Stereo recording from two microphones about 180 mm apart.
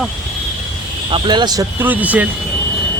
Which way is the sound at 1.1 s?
25° right (ahead or behind).